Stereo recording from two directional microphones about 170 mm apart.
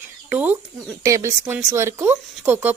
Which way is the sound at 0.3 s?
10° right (ahead or behind).